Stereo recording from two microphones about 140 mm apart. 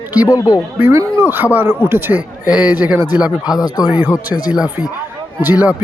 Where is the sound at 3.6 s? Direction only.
25° left (ahead or behind).